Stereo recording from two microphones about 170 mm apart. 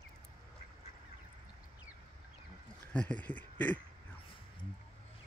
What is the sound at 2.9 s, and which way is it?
Speech, 10° left (ahead or behind).